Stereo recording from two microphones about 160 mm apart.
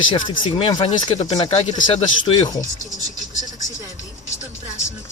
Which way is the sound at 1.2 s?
40° left (ahead or behind).